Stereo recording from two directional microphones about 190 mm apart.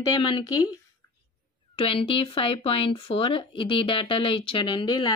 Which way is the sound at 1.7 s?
30° left (ahead or behind).